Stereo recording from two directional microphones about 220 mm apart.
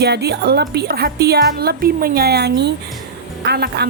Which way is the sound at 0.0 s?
50° right (ahead or behind).